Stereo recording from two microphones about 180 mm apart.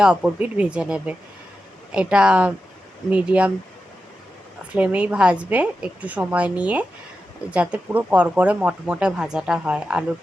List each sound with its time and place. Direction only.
0.0 s speech: 5° right (ahead or behind)
4.7 s speech: 5° right (ahead or behind)